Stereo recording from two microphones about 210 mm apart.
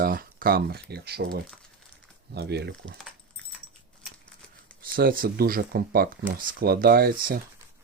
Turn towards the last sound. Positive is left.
turn(degrees=-45)  # may be behind; listen again after turning